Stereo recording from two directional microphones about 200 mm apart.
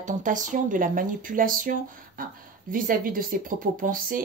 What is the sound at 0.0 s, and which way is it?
Speech, 40° right (ahead or behind).